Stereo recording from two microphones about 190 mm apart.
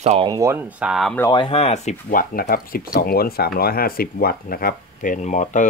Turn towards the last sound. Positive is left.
turn(degrees=40)  # may be behind; listen again after turning